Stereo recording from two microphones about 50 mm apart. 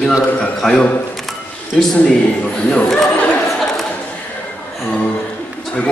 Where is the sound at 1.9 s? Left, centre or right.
Left.